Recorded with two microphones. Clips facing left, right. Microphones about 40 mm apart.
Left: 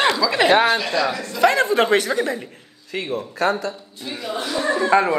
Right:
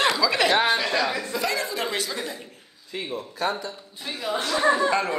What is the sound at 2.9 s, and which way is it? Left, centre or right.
Speech, left.